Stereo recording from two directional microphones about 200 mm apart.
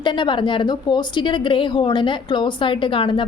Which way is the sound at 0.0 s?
25° left (ahead or behind).